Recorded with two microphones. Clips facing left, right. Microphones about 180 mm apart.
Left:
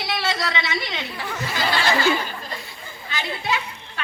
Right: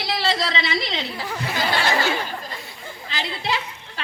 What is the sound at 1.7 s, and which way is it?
Speech, 60° right (ahead or behind).